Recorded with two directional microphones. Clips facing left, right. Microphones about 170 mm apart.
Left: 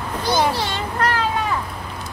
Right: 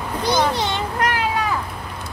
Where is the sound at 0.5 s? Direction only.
20° right (ahead or behind).